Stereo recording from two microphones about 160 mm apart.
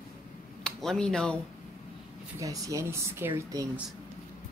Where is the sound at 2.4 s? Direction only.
20° right (ahead or behind).